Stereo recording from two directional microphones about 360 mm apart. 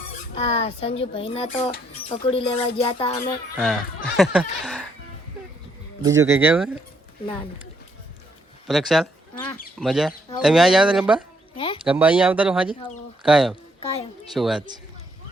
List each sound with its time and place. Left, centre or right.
0.3 s speech: centre
3.6 s speech: centre
6.0 s speech: centre
8.6 s speech: centre
11.5 s speech: centre
11.9 s speech: centre